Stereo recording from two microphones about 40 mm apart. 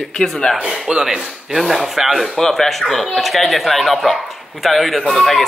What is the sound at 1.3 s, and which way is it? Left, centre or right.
A man's voice, centre.